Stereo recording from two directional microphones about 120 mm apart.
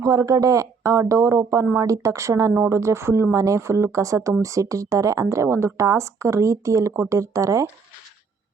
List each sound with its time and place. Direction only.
0.0 s speech: 25° right (ahead or behind)